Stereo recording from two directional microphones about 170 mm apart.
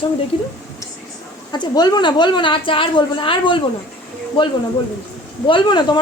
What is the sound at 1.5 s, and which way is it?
A woman's voice, 25° left (ahead or behind).